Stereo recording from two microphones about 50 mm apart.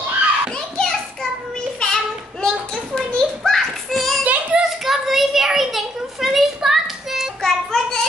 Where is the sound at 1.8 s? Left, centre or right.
Centre.